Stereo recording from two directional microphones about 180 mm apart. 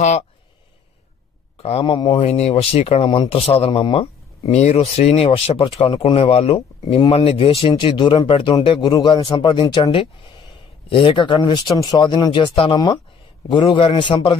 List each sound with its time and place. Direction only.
1.6 s speech: 35° left (ahead or behind)